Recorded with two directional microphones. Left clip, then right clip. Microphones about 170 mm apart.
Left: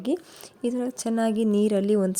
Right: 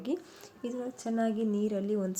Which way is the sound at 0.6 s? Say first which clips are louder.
Left 9 dB; 65° left (ahead or behind).